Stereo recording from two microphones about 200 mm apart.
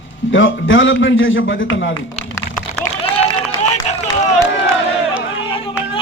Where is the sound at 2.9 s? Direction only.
35° right (ahead or behind).